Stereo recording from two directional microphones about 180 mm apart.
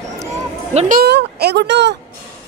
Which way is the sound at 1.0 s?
65° right (ahead or behind).